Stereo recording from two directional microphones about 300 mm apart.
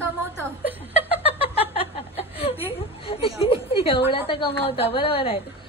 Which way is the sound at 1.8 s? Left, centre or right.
Centre.